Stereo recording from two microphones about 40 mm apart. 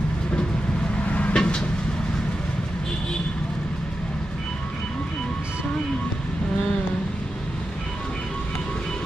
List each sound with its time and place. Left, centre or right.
1.0 s vehicle: left
1.3 s vehicle: left